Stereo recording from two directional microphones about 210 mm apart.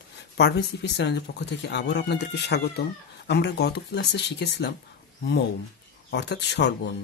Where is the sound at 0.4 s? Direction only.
50° left (ahead or behind).